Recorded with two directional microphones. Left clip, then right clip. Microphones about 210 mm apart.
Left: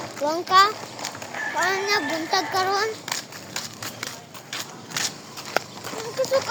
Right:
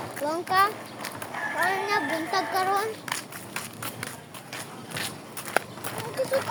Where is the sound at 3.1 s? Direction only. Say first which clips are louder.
Left 2 dB; 30° left (ahead or behind).